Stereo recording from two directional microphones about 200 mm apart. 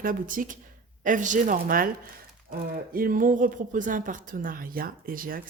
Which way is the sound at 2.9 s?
45° right (ahead or behind).